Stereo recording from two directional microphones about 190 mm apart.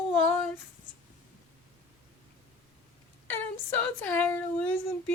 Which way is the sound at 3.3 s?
10° left (ahead or behind).